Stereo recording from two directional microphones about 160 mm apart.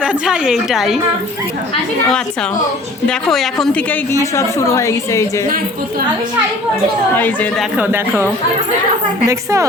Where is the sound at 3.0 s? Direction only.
5° left (ahead or behind); by 5.3 s 20° left (ahead or behind).